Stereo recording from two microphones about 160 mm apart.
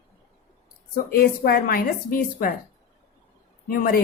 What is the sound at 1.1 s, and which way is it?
Speech, 70° left (ahead or behind).